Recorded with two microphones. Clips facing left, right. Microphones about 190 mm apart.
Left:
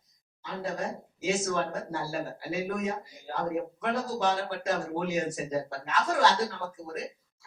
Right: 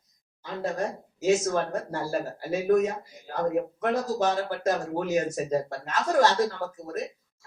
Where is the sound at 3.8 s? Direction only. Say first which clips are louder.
Right 3 dB; 45° right (ahead or behind).